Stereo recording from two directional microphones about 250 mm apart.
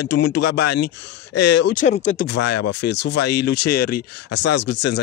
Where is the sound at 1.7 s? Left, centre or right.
Left.